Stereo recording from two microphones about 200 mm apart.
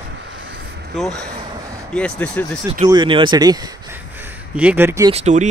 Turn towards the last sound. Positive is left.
turn(degrees=-35)  # may be behind; listen again after turning